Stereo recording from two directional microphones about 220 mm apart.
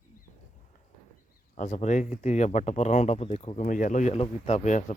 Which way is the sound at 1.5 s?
35° left (ahead or behind).